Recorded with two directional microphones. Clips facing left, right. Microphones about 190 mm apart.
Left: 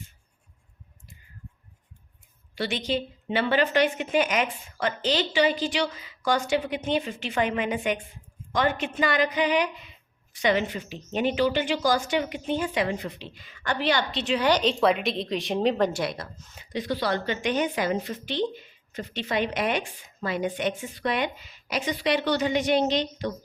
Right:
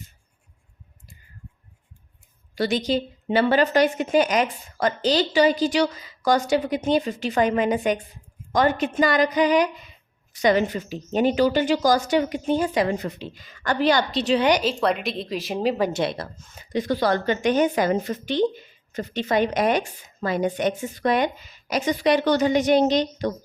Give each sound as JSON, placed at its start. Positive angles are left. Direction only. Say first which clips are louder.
{"t": 2.6, "sound": "a woman's voice", "louder": "right 5 dB", "side_deg": -40}
{"t": 14.6, "sound": "a woman's voice", "louder": "even", "side_deg": 0}
{"t": 15.9, "sound": "a woman's voice", "louder": "right 4 dB", "side_deg": -20}
{"t": 16.1, "sound": "a woman's voice", "louder": "right 5 dB", "side_deg": -45}